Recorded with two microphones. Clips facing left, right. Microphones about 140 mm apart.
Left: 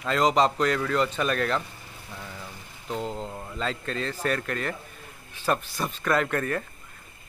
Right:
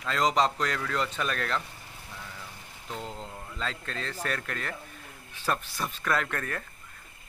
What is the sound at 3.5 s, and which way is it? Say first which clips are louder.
A man's voice: left 5 dB; 5° left (ahead or behind).